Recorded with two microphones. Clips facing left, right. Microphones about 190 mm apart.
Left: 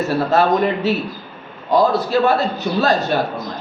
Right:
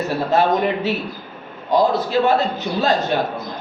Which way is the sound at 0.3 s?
15° right (ahead or behind).